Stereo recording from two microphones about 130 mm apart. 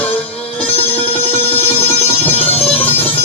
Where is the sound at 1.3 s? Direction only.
50° left (ahead or behind).